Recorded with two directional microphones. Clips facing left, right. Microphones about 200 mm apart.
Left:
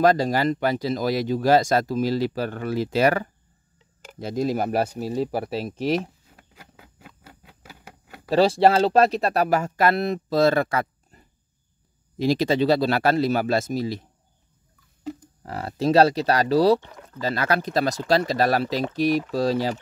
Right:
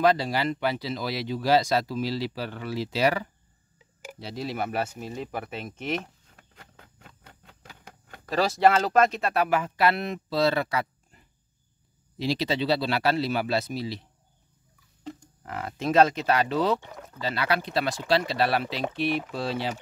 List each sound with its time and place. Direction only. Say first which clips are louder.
0.0 s speech: left 4 dB; 45° left (ahead or behind)
6.3 s a sound: left 3 dB; 5° left (ahead or behind)
8.3 s speech: left 4 dB; 30° left (ahead or behind)
15.4 s speech: left 6 dB; 35° left (ahead or behind)